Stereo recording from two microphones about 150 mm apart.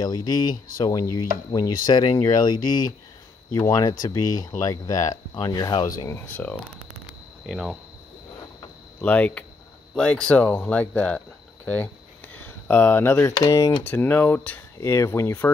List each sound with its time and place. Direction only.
0.0 s speech: 25° left (ahead or behind)
5.9 s speech: 15° left (ahead or behind)
7.4 s speech: 5° right (ahead or behind)
9.0 s speech: 10° left (ahead or behind)